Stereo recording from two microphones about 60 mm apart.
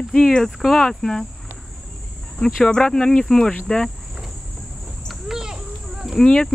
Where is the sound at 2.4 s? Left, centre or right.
Centre.